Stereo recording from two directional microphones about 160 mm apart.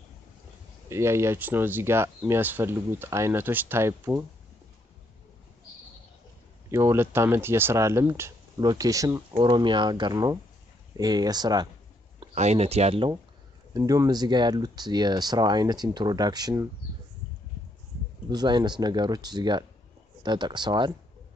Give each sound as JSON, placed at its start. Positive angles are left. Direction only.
{"t": 0.8, "sound": "speech", "side_deg": -15}
{"t": 6.7, "sound": "speech", "side_deg": -15}
{"t": 12.4, "sound": "speech", "side_deg": -45}
{"t": 13.7, "sound": "speech", "side_deg": -25}
{"t": 18.3, "sound": "speech", "side_deg": -25}